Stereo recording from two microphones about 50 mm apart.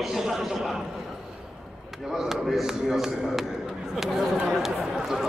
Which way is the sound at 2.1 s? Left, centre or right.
Centre.